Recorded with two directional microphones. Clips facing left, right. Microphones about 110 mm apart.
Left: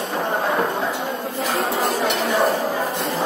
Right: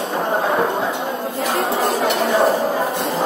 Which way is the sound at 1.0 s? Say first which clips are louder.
Right 2 dB; 5° right (ahead or behind).